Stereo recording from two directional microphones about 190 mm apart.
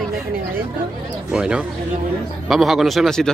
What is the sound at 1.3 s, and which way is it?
Speech, 5° right (ahead or behind).